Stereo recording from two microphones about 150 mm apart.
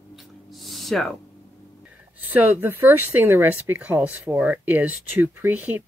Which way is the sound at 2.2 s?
10° right (ahead or behind).